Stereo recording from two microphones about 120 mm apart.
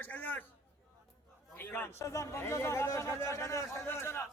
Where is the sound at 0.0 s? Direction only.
15° left (ahead or behind).